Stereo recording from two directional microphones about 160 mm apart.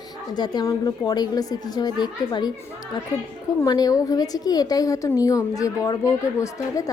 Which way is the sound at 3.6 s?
25° left (ahead or behind).